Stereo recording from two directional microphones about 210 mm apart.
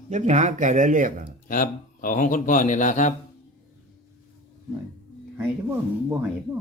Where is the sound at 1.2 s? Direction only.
40° left (ahead or behind).